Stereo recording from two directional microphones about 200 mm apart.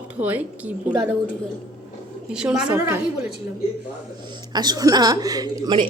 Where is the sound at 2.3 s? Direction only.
5° right (ahead or behind).